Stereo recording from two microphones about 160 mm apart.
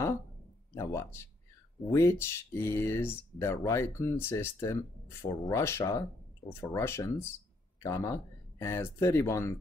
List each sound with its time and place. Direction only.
0.7 s speech: 15° left (ahead or behind)